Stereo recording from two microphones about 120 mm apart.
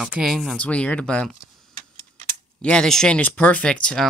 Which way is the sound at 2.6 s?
5° left (ahead or behind).